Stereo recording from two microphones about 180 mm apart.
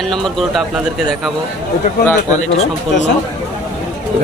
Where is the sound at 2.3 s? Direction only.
40° left (ahead or behind).